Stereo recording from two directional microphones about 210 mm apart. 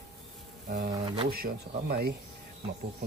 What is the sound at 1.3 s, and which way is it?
Speech, 45° right (ahead or behind).